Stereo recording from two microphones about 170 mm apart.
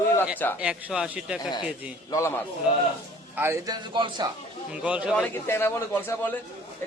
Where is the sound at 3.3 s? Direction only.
15° right (ahead or behind).